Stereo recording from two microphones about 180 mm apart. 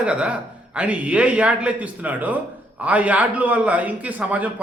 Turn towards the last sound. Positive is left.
turn(degrees=-10)  # may be behind; listen again after turning